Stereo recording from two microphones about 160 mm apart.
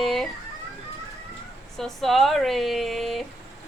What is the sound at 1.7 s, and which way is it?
Speech, centre (ahead or behind).